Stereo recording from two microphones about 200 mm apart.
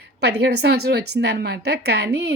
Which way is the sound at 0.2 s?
55° right (ahead or behind).